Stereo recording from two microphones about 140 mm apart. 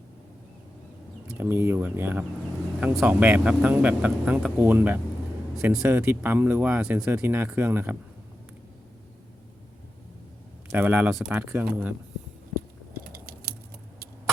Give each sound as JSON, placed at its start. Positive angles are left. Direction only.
{"t": 1.4, "sound": "speech", "side_deg": -15}
{"t": 10.7, "sound": "speech", "side_deg": -15}